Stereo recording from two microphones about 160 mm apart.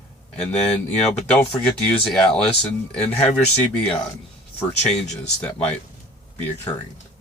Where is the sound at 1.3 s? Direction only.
5° left (ahead or behind).